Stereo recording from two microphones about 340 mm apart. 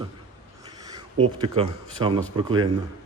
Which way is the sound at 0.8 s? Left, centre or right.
Centre.